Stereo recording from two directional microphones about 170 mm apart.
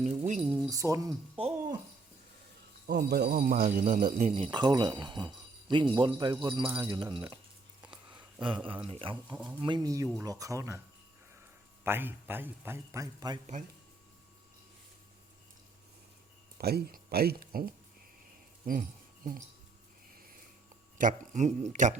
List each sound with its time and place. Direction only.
0.3 s speech: 5° right (ahead or behind)
0.7 s speech: 20° right (ahead or behind)
1.4 s speech: 35° right (ahead or behind)
2.8 s speech: 75° right (ahead or behind); by 4.3 s 50° right (ahead or behind)
4.3 s speech: 30° right (ahead or behind)
8.6 s speech: 30° right (ahead or behind)
11.8 s a man's voice: 15° right (ahead or behind)
16.6 s speech: 65° right (ahead or behind)
18.6 s jingle bell: 50° right (ahead or behind)
21.0 s speech: 45° right (ahead or behind)